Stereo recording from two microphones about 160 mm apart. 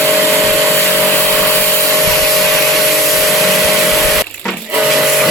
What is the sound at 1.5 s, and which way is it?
Vacuum cleaner, 10° left (ahead or behind).